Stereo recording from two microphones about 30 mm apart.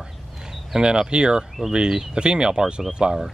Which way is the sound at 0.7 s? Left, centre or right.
Right.